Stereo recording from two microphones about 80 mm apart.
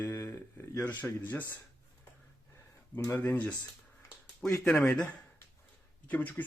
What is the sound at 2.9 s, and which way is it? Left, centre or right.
Speech, left.